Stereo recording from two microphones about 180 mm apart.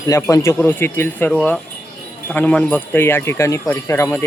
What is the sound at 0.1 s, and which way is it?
Speech, 15° left (ahead or behind).